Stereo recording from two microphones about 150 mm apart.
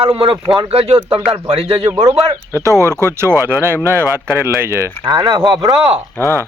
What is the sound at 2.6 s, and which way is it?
Speech, 20° right (ahead or behind).